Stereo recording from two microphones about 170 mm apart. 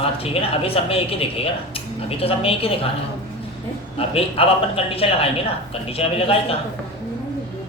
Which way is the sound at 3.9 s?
35° left (ahead or behind).